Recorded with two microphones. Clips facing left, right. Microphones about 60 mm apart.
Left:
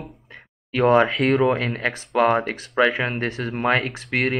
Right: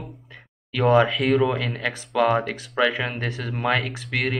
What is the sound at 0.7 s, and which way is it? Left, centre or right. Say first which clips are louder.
Speech: left 2 dB; left.